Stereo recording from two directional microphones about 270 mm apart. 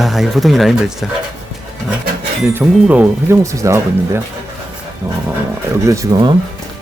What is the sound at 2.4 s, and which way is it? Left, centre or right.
Speech, centre.